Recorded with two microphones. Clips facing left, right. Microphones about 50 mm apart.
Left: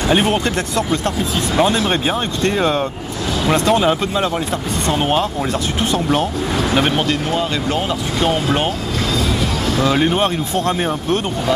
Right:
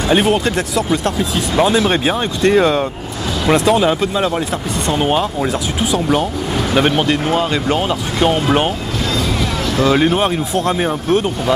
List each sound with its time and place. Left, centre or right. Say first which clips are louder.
0.1 s speech: right 3 dB; centre
3.8 s speech: right 1 dB; centre
7.0 s speech: right 3 dB; centre
9.8 s speech: right 3 dB; centre